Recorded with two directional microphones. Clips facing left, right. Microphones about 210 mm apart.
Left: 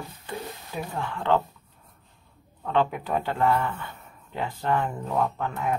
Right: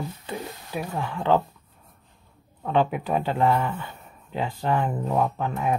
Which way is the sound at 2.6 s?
15° right (ahead or behind).